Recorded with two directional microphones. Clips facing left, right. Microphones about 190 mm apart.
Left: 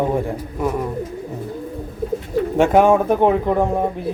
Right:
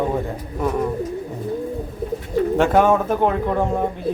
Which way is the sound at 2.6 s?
10° left (ahead or behind).